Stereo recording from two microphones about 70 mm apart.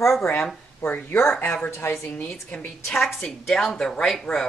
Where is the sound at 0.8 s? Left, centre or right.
Left.